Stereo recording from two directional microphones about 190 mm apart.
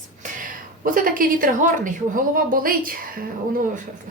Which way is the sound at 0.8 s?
45° right (ahead or behind).